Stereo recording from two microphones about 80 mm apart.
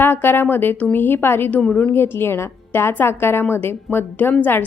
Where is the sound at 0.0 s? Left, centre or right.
Left.